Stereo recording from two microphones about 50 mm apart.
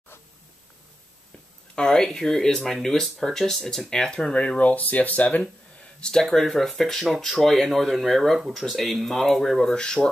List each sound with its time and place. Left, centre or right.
1.8 s speech: centre
4.1 s speech: left
5.9 s speech: centre
6.2 s speech: centre